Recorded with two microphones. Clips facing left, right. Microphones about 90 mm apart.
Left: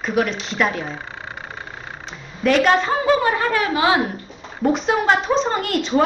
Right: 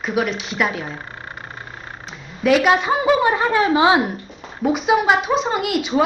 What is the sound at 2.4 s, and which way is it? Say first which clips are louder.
A woman's voice: right 1 dB; 5° right (ahead or behind).